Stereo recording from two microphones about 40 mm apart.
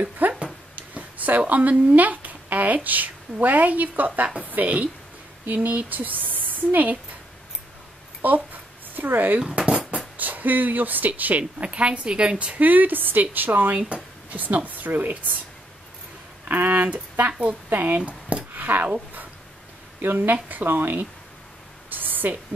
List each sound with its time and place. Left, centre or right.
0.2 s a sound: right
1.5 s speech: right
8.2 s a child's voice: right
9.6 s a sound: right
10.1 s speech: right
12.5 s speech: right
13.7 s speech: right
14.3 s speech: right
16.4 s speech: right
17.3 s a woman's voice: right
17.6 s speech: right
18.5 s a sound: right
20.0 s a woman's voice: right
21.9 s a sound: right